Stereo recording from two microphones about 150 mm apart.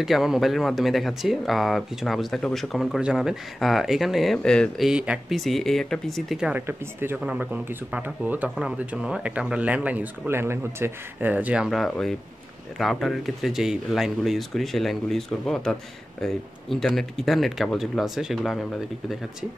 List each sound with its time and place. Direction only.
0.0 s speech: centre (ahead or behind)